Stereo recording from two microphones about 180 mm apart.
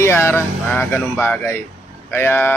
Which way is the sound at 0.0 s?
15° left (ahead or behind).